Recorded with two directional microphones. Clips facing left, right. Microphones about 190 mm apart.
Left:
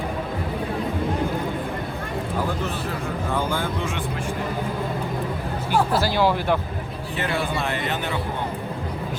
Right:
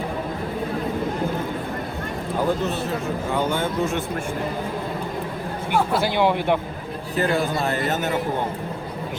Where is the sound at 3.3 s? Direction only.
15° right (ahead or behind).